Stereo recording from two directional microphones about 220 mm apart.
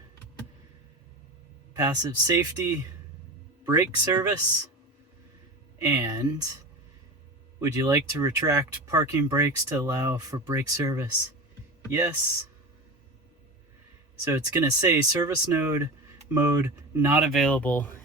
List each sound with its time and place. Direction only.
1.7 s speech: 15° right (ahead or behind)
5.8 s speech: 15° right (ahead or behind)
7.6 s speech: 15° right (ahead or behind)
14.3 s speech: 15° right (ahead or behind); by 17.9 s 10° left (ahead or behind)